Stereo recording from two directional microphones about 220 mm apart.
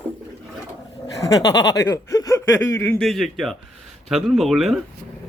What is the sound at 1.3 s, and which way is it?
Speech, 20° left (ahead or behind).